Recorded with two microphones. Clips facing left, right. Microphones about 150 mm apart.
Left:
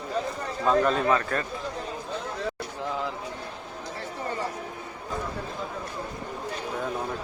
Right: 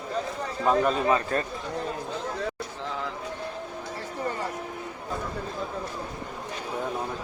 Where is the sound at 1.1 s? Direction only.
25° right (ahead or behind).